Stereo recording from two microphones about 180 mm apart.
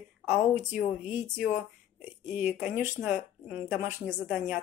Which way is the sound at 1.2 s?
5° right (ahead or behind).